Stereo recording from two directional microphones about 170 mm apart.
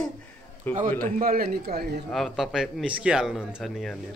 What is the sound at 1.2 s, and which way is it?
Speech, 60° right (ahead or behind).